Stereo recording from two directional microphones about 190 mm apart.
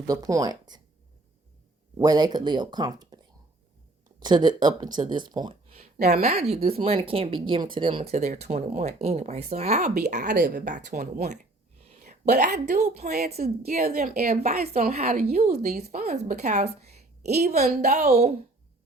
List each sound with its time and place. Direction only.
0.1 s speech: 20° right (ahead or behind)
2.0 s speech: 20° right (ahead or behind)
4.2 s speech: 20° right (ahead or behind)
10.2 s a woman's voice: 60° right (ahead or behind)
10.5 s speech: 45° right (ahead or behind)
11.0 s a woman's voice: 55° right (ahead or behind)
11.3 s a sound: 35° right (ahead or behind)
12.7 s speech: 35° right (ahead or behind)
14.4 s speech: 35° right (ahead or behind)